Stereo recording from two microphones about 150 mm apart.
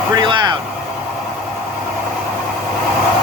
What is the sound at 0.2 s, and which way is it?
Vehicle, 30° right (ahead or behind).